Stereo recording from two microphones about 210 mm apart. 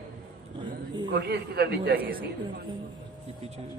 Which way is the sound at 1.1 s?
50° right (ahead or behind).